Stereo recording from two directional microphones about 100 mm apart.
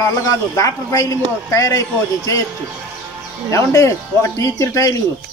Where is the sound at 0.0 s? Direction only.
35° left (ahead or behind).